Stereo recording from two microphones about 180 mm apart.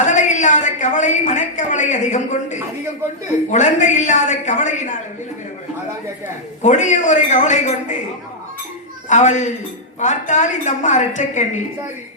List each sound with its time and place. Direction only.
0.0 s a woman's voice: 40° left (ahead or behind)
6.6 s a woman's voice: 40° left (ahead or behind)
9.0 s a woman's voice: 40° left (ahead or behind)